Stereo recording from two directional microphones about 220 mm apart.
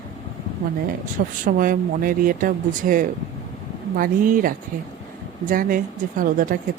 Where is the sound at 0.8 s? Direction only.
35° right (ahead or behind).